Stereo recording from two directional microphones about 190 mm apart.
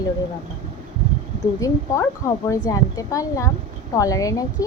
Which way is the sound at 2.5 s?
20° left (ahead or behind).